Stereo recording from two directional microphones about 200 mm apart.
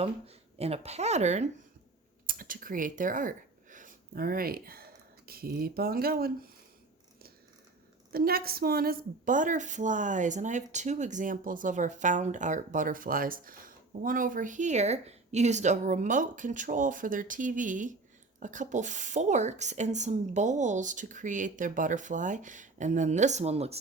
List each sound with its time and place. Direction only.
0.6 s a woman's voice: 30° right (ahead or behind); by 6.5 s 50° right (ahead or behind)
8.1 s a woman's voice: 50° right (ahead or behind); by 23.7 s 30° right (ahead or behind)